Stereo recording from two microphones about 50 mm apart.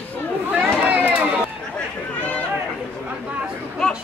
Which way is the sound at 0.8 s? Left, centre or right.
Right.